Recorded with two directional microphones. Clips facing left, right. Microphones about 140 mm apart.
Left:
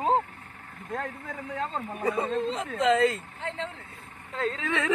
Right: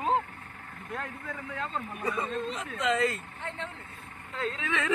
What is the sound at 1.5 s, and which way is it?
Speech, 35° left (ahead or behind).